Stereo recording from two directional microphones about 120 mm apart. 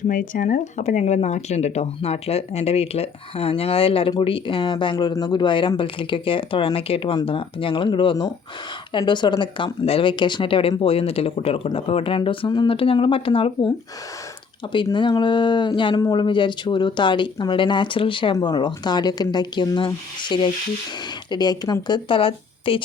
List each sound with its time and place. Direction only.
0.1 s speech: 90° left; by 13.7 s 45° left (ahead or behind)
14.9 s speech: 40° left (ahead or behind)
18.3 s speech: 35° left (ahead or behind)